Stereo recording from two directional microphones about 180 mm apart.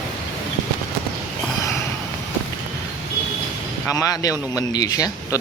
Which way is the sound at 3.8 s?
20° left (ahead or behind).